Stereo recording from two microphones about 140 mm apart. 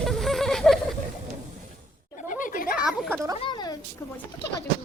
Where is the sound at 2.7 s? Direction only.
5° right (ahead or behind).